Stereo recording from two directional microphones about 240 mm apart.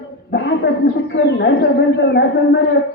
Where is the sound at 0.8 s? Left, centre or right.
Left.